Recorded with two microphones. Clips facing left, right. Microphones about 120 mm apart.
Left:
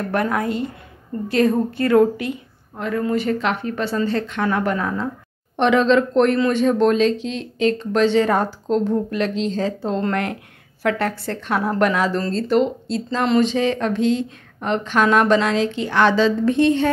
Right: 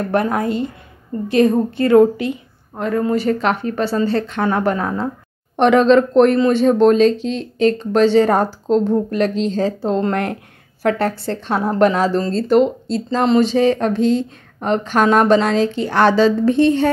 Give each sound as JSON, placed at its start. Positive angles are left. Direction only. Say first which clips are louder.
{"t": 0.1, "sound": "a woman's voice", "louder": "right 3 dB", "side_deg": -30}
{"t": 2.8, "sound": "a woman's voice", "louder": "right 3 dB", "side_deg": -35}
{"t": 5.6, "sound": "a woman's voice", "louder": "right 4 dB", "side_deg": -45}